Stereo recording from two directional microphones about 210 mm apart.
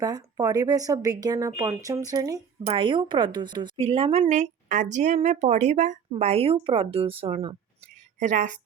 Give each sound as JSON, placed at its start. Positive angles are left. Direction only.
{"t": 0.0, "sound": "a woman's voice", "side_deg": -15}